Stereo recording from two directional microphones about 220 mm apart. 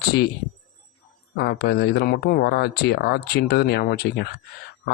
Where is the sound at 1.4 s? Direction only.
45° left (ahead or behind).